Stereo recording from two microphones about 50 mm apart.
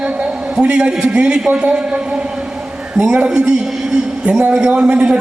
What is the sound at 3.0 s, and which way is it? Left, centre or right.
A man's voice, right.